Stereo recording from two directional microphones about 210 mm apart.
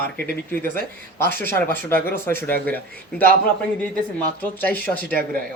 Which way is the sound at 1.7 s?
10° left (ahead or behind).